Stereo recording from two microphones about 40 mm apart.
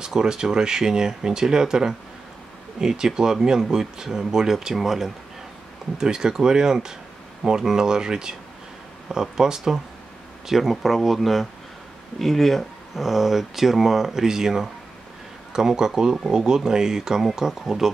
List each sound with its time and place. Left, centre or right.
0.0 s speech: centre